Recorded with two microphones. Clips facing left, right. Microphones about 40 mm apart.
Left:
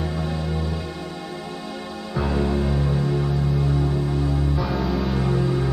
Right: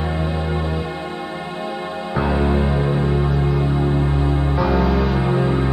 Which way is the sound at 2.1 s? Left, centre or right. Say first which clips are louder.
Right 4 dB; right.